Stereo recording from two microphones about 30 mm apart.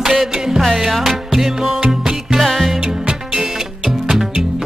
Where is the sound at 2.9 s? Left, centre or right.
Right.